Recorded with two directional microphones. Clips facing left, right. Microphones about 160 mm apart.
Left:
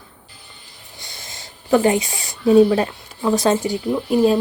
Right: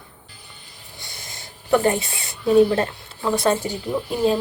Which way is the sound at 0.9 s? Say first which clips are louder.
Left 1 dB; 20° left (ahead or behind).